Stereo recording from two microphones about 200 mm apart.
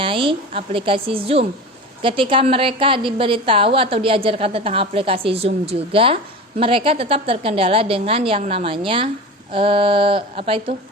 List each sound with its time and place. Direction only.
0.0 s a woman's voice: 25° right (ahead or behind)